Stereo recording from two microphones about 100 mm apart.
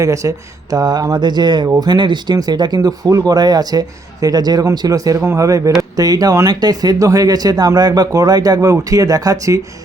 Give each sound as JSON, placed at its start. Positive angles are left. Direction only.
{"t": 0.0, "sound": "speech", "side_deg": -35}